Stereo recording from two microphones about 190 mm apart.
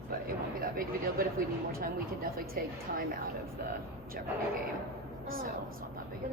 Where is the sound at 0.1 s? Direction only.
50° right (ahead or behind).